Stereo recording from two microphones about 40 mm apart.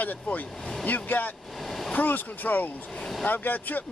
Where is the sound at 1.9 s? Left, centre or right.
Left.